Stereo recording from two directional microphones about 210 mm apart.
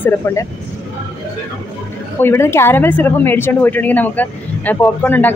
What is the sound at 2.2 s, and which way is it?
Speech, 10° left (ahead or behind).